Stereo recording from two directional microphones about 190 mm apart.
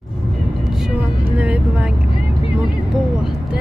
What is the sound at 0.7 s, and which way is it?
Vehicle, 5° right (ahead or behind).